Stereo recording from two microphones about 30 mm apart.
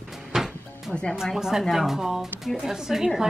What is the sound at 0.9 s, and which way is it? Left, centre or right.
Speech, left.